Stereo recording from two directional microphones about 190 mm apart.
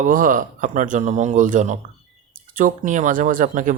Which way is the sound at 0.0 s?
45° right (ahead or behind).